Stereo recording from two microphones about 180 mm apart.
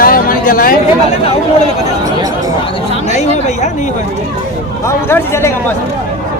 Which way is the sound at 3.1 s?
40° left (ahead or behind).